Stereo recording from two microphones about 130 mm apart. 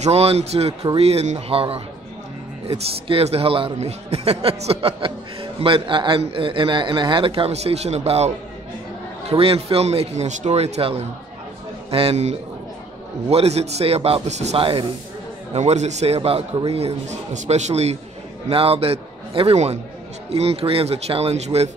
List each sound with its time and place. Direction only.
0.0 s a man's voice: 50° right (ahead or behind)
9.3 s a man's voice: 45° right (ahead or behind)
14.6 s speech: 40° right (ahead or behind)
15.5 s a man's voice: 60° right (ahead or behind)
18.5 s a man's voice: 50° right (ahead or behind)